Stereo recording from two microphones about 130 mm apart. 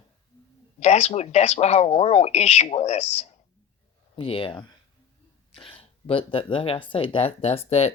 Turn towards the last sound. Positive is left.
turn(degrees=55)  # may be behind; listen again after turning